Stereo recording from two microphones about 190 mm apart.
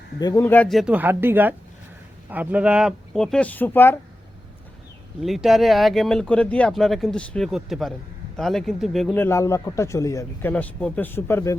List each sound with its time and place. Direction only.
0.2 s speech: 20° left (ahead or behind)
5.2 s speech: centre (ahead or behind)
9.1 s speech: 15° left (ahead or behind)
10.5 s speech: 5° left (ahead or behind)